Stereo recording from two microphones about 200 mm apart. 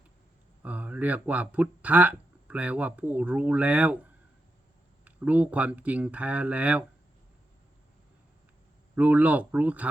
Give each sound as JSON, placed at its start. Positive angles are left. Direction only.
{"t": 0.6, "sound": "speech", "side_deg": -5}
{"t": 5.0, "sound": "speech", "side_deg": -5}
{"t": 9.0, "sound": "speech", "side_deg": -5}